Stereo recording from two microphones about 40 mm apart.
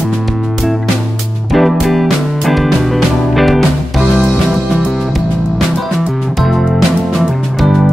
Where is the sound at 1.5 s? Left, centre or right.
Centre.